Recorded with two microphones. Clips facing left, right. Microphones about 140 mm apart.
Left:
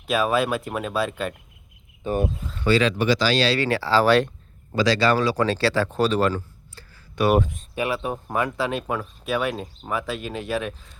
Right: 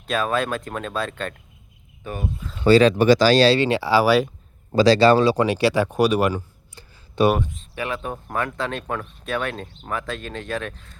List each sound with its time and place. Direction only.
0.1 s speech: 10° left (ahead or behind)
2.0 s speech: 25° left (ahead or behind)
2.6 s speech: 35° right (ahead or behind)
3.6 s speech: 20° right (ahead or behind)
4.7 s speech: 30° right (ahead or behind)
7.8 s speech: 10° left (ahead or behind)